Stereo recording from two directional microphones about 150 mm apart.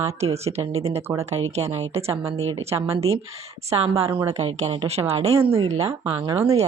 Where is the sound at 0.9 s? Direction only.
20° right (ahead or behind).